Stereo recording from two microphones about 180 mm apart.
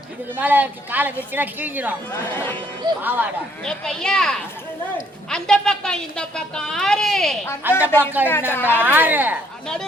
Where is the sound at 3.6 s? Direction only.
5° left (ahead or behind).